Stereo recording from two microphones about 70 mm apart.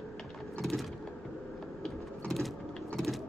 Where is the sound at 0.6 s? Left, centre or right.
Centre.